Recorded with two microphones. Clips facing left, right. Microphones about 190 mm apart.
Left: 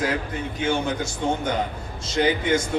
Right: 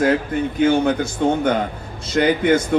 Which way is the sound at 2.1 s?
60° right (ahead or behind).